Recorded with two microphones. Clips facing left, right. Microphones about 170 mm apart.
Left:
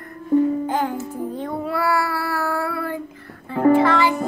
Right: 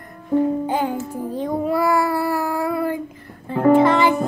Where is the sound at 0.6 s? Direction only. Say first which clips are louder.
Right 1 dB; 15° right (ahead or behind).